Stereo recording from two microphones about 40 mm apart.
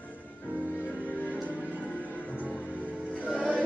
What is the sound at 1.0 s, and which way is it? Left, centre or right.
Music, left.